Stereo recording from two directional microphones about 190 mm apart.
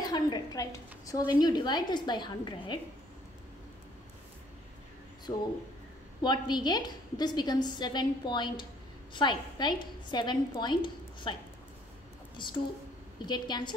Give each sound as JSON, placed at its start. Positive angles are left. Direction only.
{"t": 0.0, "sound": "a sound", "side_deg": 20}
{"t": 1.4, "sound": "a woman's voice", "side_deg": 20}
{"t": 5.3, "sound": "a woman's voice", "side_deg": 15}
{"t": 12.4, "sound": "a woman's voice", "side_deg": 25}